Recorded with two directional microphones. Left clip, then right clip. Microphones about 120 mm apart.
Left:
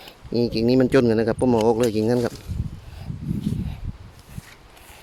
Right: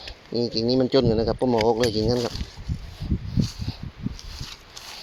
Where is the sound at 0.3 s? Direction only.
70° left (ahead or behind).